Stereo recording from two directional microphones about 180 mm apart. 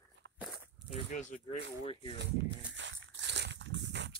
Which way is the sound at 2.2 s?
75° right (ahead or behind).